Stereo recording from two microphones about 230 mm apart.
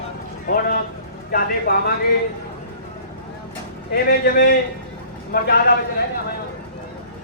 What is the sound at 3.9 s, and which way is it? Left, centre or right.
A man's voice, left.